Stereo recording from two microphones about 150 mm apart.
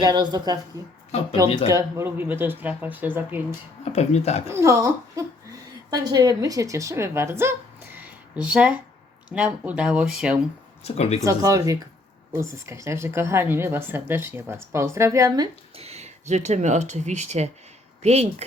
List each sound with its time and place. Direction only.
0.0 s speech: 30° right (ahead or behind)
1.6 s a woman's voice: 20° right (ahead or behind)
3.9 s speech: 45° left (ahead or behind)
4.4 s a woman's voice: 20° right (ahead or behind)
10.8 s speech: 45° left (ahead or behind)
11.2 s a woman's voice: 20° right (ahead or behind)
15.7 s speech: 45° right (ahead or behind)